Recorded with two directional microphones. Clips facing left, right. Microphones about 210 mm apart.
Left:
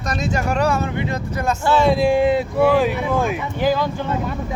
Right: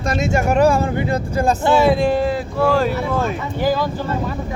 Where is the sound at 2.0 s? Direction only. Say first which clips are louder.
Left 2 dB; 15° left (ahead or behind).